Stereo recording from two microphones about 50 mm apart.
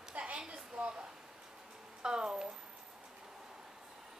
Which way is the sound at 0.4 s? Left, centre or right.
Centre.